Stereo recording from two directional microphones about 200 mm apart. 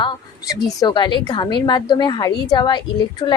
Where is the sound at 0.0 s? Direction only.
20° left (ahead or behind).